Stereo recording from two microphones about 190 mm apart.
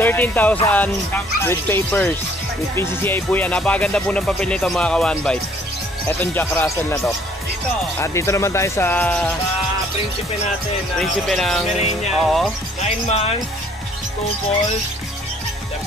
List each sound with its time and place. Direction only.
0.0 s speech: 10° left (ahead or behind)
8.0 s speech: 15° left (ahead or behind)
11.0 s speech: centre (ahead or behind)
11.7 s music: 35° left (ahead or behind)
12.2 s speech: centre (ahead or behind)
13.1 s music: 30° left (ahead or behind)